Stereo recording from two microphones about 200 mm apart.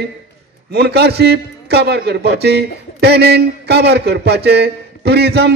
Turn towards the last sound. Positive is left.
turn(degrees=-55)  # may be behind; listen again after turning